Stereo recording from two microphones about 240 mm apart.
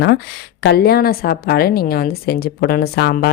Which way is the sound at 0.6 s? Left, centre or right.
Left.